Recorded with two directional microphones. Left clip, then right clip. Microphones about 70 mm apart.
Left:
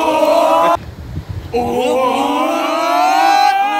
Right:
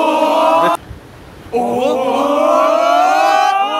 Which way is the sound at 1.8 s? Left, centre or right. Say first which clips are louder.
Left 1 dB; right.